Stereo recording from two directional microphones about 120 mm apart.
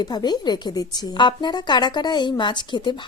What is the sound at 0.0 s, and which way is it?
A woman's voice, 35° left (ahead or behind).